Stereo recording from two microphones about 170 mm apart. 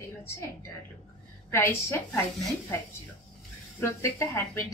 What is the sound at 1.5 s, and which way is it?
Speech, 15° left (ahead or behind).